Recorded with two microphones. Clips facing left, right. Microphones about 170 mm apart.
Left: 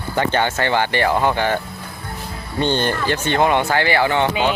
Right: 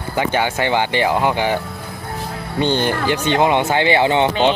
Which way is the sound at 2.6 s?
15° right (ahead or behind).